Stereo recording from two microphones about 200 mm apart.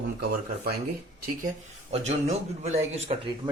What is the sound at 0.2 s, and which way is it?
Speech, 50° right (ahead or behind).